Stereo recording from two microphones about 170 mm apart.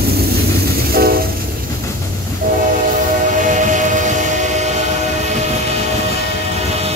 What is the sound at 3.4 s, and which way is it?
Train, 45° right (ahead or behind).